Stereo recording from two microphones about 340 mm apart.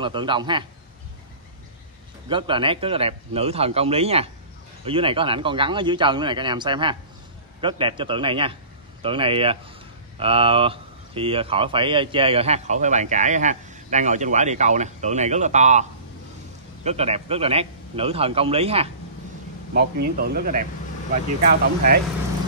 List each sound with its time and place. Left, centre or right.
0.0 s speech: centre
2.2 s speech: centre
19.7 s speech: right